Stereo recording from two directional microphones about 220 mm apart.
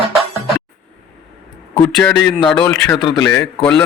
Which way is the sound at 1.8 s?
10° left (ahead or behind).